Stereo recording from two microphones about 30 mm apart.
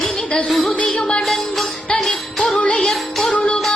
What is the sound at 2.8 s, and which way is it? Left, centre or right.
Music, centre.